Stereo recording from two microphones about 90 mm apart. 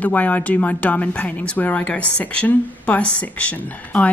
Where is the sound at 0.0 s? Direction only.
15° left (ahead or behind).